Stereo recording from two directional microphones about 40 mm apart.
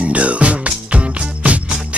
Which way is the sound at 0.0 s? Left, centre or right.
Right.